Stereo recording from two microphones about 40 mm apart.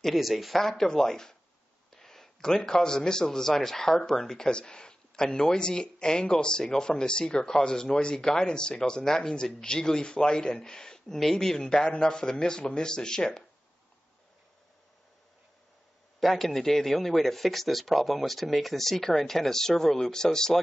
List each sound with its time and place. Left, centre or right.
0.0 s a man's voice: centre
0.6 s a man's voice: centre
4.5 s speech: left
16.2 s a man's voice: centre